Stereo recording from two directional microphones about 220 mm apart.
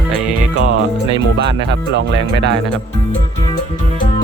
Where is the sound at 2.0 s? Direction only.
50° right (ahead or behind).